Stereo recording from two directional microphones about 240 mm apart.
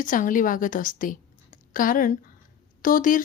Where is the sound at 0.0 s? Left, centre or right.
Left.